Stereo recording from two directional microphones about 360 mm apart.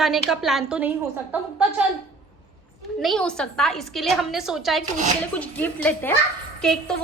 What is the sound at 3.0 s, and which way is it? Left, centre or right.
A woman's voice, centre.